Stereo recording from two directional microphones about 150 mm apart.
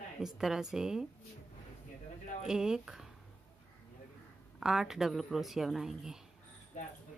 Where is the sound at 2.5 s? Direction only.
5° right (ahead or behind).